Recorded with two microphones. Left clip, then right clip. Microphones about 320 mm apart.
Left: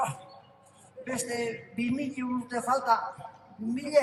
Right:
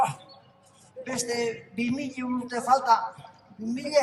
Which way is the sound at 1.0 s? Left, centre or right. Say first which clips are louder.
Right 3 dB; centre.